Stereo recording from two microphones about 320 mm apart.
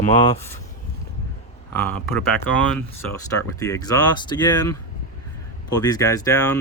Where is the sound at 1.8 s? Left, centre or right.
Centre.